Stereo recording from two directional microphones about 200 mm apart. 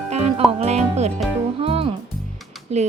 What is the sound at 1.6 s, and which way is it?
Music, 30° right (ahead or behind).